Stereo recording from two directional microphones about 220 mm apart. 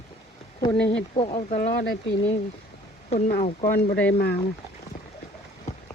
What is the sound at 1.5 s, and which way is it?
Speech, 40° left (ahead or behind).